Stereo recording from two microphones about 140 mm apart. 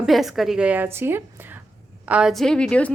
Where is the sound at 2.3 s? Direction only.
5° left (ahead or behind).